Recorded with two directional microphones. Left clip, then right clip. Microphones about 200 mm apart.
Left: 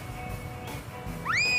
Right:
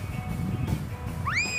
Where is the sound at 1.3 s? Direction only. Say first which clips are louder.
Even; 25° left (ahead or behind).